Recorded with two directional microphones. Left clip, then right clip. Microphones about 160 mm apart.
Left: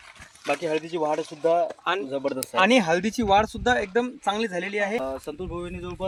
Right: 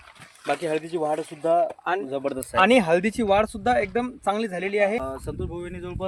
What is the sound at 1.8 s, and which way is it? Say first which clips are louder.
Speech: even; 30° right (ahead or behind).